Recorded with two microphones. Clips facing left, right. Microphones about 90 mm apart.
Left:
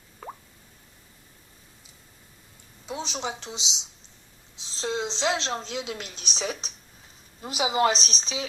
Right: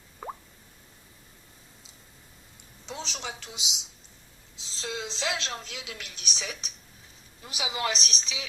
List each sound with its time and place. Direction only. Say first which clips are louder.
0.2 s plop: right 2 dB; 15° right (ahead or behind)
2.8 s a woman's voice: left 5 dB; 15° left (ahead or behind); by 8.4 s 35° left (ahead or behind)